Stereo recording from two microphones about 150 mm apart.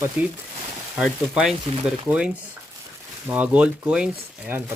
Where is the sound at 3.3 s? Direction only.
10° right (ahead or behind).